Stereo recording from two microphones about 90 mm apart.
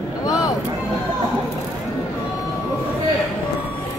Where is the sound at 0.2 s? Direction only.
45° left (ahead or behind).